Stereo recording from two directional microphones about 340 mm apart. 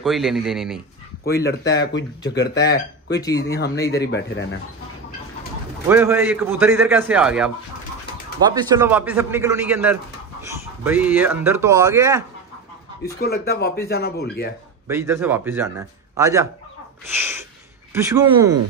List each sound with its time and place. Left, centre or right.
0.0 s a man's voice: centre
1.2 s speech: left
3.2 s speech: centre
3.4 s speech: left
5.9 s a man's voice: centre
13.2 s speech: left
14.9 s speech: centre
17.1 s a sound: centre
17.9 s speech: centre